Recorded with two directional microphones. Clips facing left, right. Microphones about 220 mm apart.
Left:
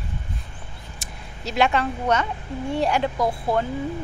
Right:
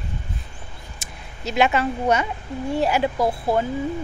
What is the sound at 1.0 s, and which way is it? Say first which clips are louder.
Speech: even; centre (ahead or behind).